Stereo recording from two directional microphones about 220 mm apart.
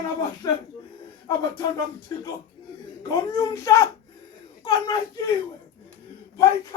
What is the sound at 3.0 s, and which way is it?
Speech, 15° left (ahead or behind).